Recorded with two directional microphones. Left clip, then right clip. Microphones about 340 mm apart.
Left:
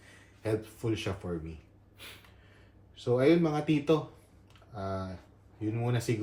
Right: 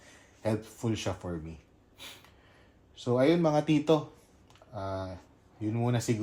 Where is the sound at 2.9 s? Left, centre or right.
Right.